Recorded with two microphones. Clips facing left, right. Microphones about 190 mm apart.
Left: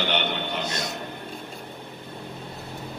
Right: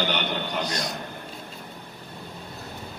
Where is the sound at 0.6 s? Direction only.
25° left (ahead or behind).